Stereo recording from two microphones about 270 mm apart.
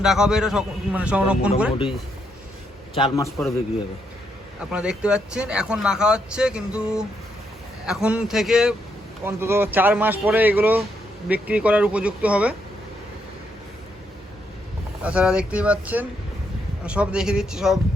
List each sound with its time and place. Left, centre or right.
0.0 s speech: centre
2.9 s a man's voice: centre
3.2 s speech: centre
4.7 s speech: centre
15.0 s speech: centre